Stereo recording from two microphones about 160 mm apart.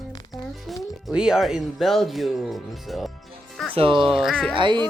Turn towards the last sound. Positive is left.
turn(degrees=-30)  # may be behind; listen again after turning